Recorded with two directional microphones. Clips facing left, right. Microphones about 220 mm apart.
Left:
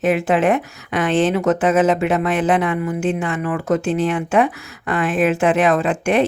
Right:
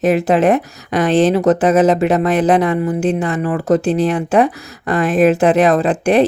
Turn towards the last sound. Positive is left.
turn(degrees=-35)  # may be behind; listen again after turning